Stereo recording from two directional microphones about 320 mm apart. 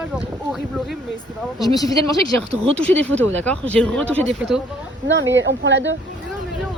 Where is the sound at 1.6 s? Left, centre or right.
Centre.